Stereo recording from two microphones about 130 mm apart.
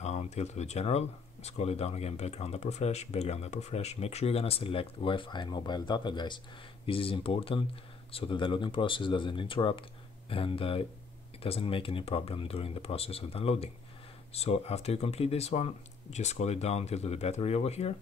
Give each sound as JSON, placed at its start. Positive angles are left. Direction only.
{"t": 0.0, "sound": "speech", "side_deg": 60}